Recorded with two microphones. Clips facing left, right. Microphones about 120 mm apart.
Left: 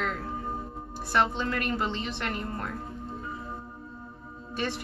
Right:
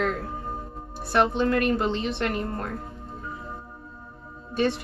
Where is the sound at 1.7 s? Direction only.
30° right (ahead or behind).